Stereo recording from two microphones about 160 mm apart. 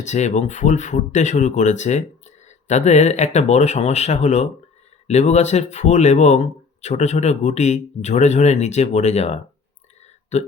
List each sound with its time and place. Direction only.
0.0 s speech: 45° left (ahead or behind)